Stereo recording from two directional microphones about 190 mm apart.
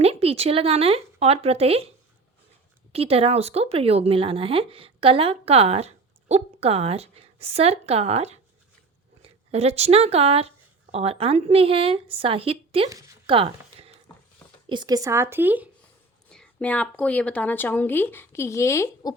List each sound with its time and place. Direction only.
0.0 s speech: 30° right (ahead or behind)
2.9 s a woman's voice: 30° right (ahead or behind)
12.9 s a woman's voice: 15° right (ahead or behind)
13.2 s a sound: 30° right (ahead or behind)
14.7 s a woman's voice: 20° right (ahead or behind)
16.3 s speech: 5° left (ahead or behind)